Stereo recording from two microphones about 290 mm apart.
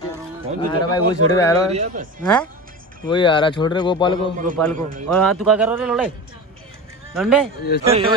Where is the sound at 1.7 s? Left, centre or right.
Right.